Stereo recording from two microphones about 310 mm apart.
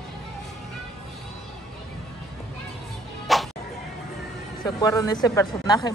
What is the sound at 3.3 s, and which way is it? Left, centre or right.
Music, centre.